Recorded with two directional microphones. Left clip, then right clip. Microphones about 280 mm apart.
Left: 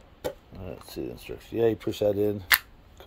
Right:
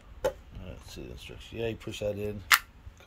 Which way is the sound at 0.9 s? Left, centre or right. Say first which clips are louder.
Left 9 dB; left.